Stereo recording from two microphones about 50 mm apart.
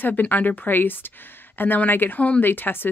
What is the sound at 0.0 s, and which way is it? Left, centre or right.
Speech, left.